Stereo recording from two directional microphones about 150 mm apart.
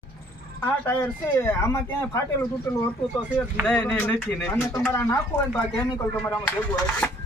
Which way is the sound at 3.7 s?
5° left (ahead or behind).